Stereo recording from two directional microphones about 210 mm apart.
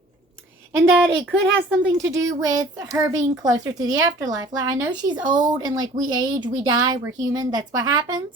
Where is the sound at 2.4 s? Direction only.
15° right (ahead or behind).